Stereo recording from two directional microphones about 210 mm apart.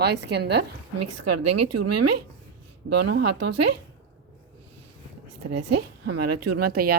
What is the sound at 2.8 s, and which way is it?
Speech, 75° right (ahead or behind).